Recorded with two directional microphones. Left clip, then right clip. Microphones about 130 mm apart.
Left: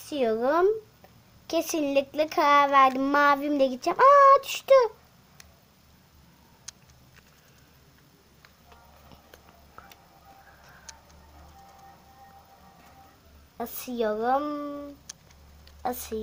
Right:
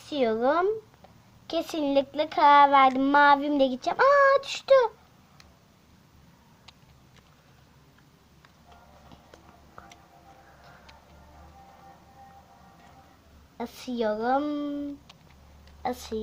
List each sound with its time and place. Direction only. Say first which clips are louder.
0.1 s speech: even; 40° left (ahead or behind); by 4.9 s 70° left (ahead or behind)
13.6 s speech: left 1 dB; 60° left (ahead or behind)
15.8 s speech: even; 35° left (ahead or behind)